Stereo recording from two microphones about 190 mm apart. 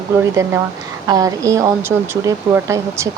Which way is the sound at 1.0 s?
20° right (ahead or behind).